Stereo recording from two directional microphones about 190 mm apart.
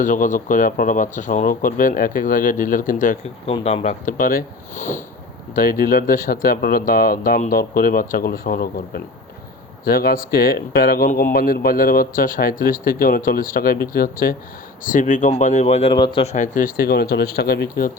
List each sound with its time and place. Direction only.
0.0 s speech: 40° left (ahead or behind)
3.4 s speech: 30° left (ahead or behind)
16.3 s speech: 40° left (ahead or behind)